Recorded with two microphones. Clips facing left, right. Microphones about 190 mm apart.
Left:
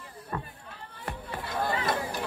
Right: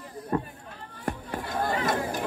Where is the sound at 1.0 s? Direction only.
45° right (ahead or behind).